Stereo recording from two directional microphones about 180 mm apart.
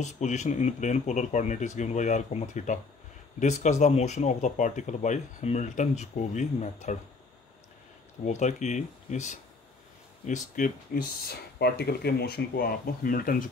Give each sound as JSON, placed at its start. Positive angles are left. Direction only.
{"t": 0.0, "sound": "speech", "side_deg": 40}
{"t": 8.3, "sound": "speech", "side_deg": 40}